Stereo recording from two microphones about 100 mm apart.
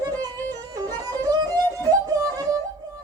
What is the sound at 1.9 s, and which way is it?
Music, 35° right (ahead or behind).